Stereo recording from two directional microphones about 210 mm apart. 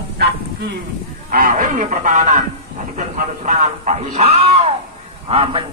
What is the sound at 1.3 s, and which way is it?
Speech, 40° right (ahead or behind).